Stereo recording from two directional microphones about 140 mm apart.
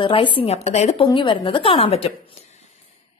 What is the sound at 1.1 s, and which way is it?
A woman's voice, 35° left (ahead or behind).